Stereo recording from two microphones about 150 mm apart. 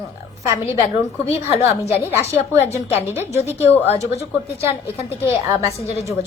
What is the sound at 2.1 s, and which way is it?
A woman's voice, 20° right (ahead or behind).